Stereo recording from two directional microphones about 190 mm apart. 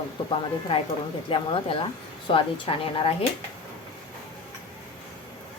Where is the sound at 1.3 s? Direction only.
25° left (ahead or behind).